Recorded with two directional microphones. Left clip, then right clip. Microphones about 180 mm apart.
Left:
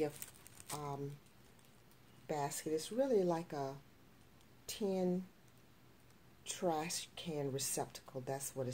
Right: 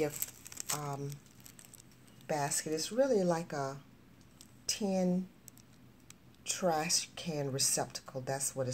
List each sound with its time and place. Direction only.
0.7 s speech: 20° left (ahead or behind)
2.2 s a woman's voice: 20° left (ahead or behind)
6.4 s speech: 20° left (ahead or behind)